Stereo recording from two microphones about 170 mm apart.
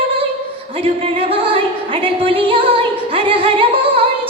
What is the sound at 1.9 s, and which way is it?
Singing, 30° right (ahead or behind).